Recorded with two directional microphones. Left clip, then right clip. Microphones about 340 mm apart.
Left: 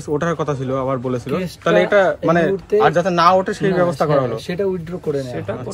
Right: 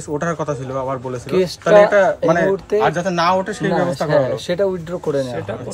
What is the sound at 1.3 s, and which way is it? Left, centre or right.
Speech, right.